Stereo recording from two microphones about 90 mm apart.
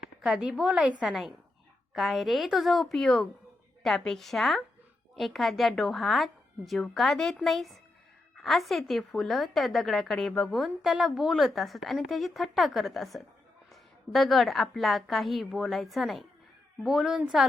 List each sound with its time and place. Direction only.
0.2 s a woman's voice: 5° right (ahead or behind)
1.0 s a woman's voice: centre (ahead or behind)